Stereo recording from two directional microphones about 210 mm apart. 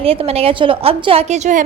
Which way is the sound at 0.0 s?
25° right (ahead or behind).